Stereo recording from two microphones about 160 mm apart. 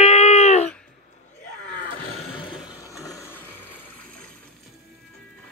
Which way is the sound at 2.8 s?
20° left (ahead or behind).